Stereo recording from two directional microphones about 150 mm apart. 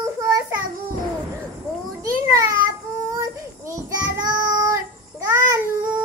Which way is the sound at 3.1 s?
20° right (ahead or behind).